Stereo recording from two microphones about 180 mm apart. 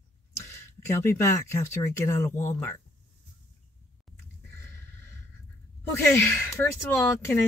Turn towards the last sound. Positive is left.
turn(degrees=15)  # may be behind; listen again after turning